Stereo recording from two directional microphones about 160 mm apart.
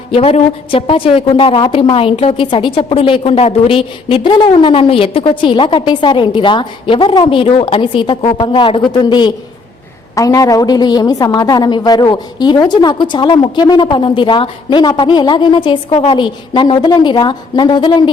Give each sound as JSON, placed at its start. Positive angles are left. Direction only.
{"t": 0.1, "sound": "a woman's voice", "side_deg": 40}